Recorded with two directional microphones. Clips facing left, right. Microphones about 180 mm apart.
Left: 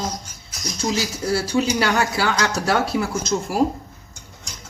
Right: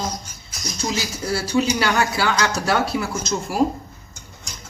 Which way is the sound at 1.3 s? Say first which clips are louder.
Even; 40° left (ahead or behind).